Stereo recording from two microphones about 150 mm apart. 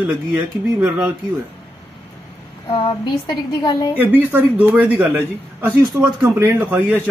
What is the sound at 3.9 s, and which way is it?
A man's voice, 15° right (ahead or behind).